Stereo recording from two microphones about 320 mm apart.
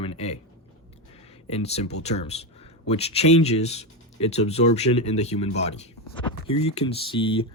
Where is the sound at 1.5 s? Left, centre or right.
Centre.